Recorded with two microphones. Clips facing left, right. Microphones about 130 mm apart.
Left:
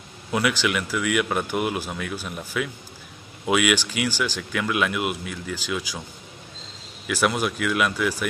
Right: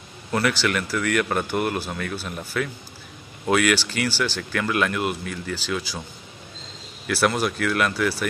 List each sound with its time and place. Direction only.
0.3 s speech: 5° left (ahead or behind)
7.1 s speech: 5° right (ahead or behind)
7.3 s speech: 5° left (ahead or behind)